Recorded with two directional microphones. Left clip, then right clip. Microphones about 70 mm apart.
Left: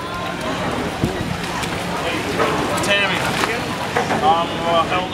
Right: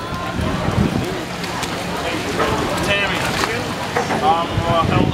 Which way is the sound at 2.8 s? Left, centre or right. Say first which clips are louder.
Left 2 dB; left.